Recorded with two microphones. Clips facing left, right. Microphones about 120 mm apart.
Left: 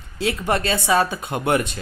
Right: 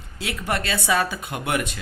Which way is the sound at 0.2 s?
30° left (ahead or behind).